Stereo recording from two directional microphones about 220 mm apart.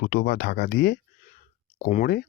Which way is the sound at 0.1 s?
45° left (ahead or behind).